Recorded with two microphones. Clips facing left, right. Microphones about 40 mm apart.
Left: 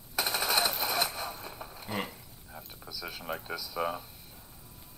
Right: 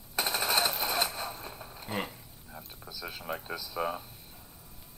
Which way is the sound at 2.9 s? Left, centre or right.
Centre.